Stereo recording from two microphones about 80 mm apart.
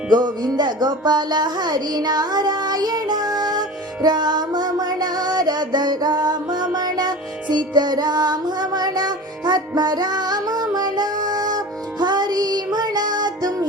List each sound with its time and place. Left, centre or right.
0.1 s music: right